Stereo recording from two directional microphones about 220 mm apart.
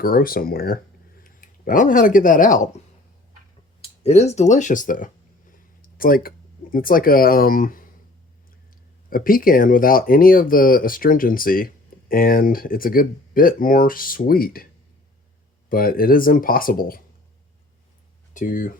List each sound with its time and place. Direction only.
0.0 s speech: 40° left (ahead or behind)
3.8 s speech: 30° left (ahead or behind)
9.0 s speech: 40° left (ahead or behind)
15.7 s speech: 40° left (ahead or behind)
18.3 s speech: 35° left (ahead or behind)